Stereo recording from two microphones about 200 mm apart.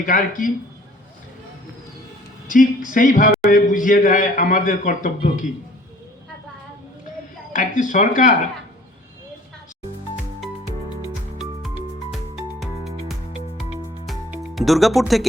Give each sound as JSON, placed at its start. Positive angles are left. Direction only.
{"t": 0.0, "sound": "speech", "side_deg": 40}
{"t": 2.5, "sound": "a man's voice", "side_deg": 40}
{"t": 7.5, "sound": "a man's voice", "side_deg": 40}
{"t": 12.1, "sound": "music", "side_deg": 0}